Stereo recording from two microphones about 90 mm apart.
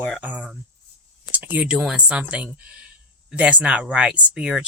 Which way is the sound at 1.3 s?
20° right (ahead or behind).